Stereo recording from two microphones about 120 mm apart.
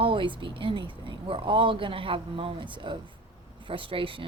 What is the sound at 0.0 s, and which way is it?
Speech, 45° right (ahead or behind).